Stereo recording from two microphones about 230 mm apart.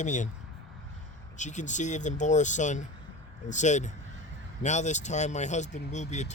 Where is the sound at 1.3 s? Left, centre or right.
Left.